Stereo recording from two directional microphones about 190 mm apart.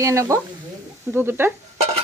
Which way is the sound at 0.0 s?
15° right (ahead or behind).